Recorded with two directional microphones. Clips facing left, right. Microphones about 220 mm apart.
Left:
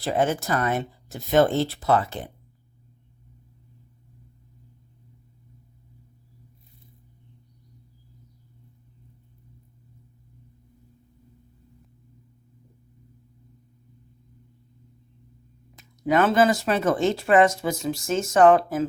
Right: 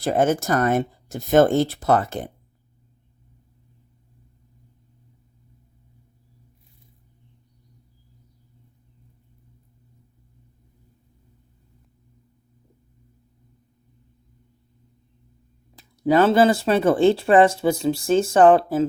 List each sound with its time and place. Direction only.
0.0 s speech: 45° right (ahead or behind)
15.7 s speech: 30° right (ahead or behind)